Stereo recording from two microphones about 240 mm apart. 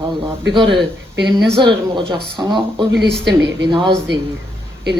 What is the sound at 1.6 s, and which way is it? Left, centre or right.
Speech, centre.